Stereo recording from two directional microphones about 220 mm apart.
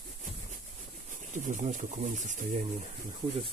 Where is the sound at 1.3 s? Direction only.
35° right (ahead or behind).